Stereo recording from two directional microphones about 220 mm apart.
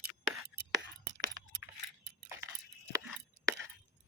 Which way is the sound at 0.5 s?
75° right (ahead or behind).